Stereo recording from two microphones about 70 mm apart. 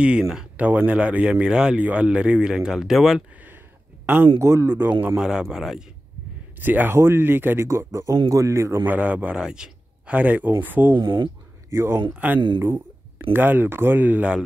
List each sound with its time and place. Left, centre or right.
0.0 s speech: centre
0.6 s speech: right; by 3.3 s centre
4.0 s a sound: right
4.4 s speech: right
5.0 s speech: centre
6.6 s a man's voice: right
7.6 s speech: right
8.8 s a man's voice: right
11.0 s speech: right
11.7 s speech: right
12.2 s a man's voice: right